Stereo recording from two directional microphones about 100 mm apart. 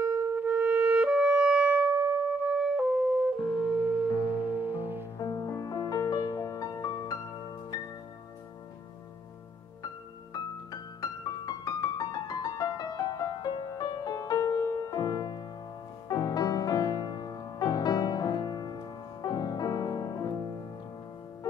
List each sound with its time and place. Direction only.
0.0 s music: 25° right (ahead or behind)
5.2 s music: 40° left (ahead or behind)
10.3 s music: 40° left (ahead or behind)